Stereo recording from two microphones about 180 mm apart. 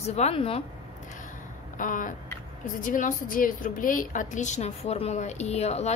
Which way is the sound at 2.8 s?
50° left (ahead or behind).